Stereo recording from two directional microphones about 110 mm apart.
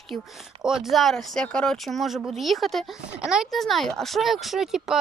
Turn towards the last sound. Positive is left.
turn(degrees=-5)  # may be behind; listen again after turning